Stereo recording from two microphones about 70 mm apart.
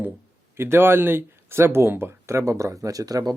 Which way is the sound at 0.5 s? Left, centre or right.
Right.